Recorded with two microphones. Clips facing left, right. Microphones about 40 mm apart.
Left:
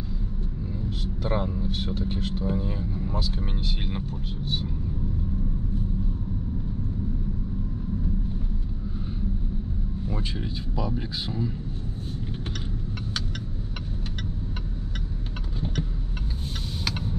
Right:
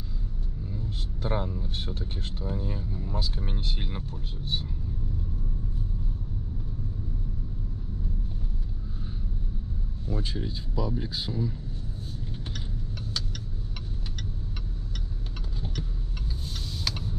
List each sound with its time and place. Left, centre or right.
1.3 s speech: left
10.0 s speech: left